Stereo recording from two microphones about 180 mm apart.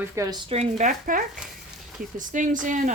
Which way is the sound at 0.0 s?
20° right (ahead or behind).